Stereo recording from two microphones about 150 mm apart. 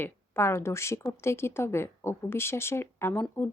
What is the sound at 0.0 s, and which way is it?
Speech, 15° left (ahead or behind).